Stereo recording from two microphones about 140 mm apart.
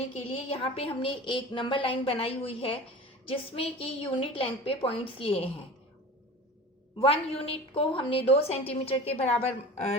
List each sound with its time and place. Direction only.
0.3 s a woman's voice: 45° left (ahead or behind)
7.0 s a woman's voice: 40° left (ahead or behind)